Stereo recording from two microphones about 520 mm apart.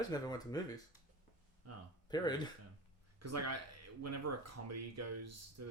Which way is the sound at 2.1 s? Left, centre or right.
Centre.